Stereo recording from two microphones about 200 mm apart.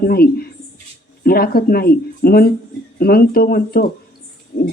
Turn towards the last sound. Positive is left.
turn(degrees=45)  # may be behind; listen again after turning